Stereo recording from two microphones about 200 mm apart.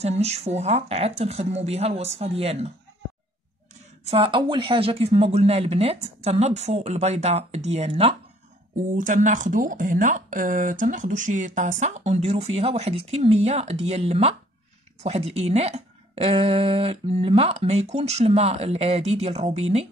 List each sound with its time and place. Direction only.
0.0 s speech: 30° right (ahead or behind)
4.0 s speech: 30° right (ahead or behind)
8.9 s speech: 40° right (ahead or behind)